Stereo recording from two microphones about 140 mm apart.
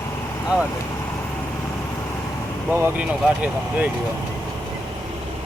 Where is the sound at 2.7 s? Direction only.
10° right (ahead or behind).